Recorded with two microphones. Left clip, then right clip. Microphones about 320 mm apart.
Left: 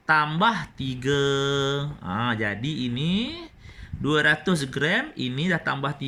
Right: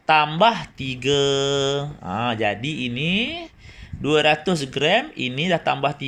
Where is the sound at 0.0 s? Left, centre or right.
Centre.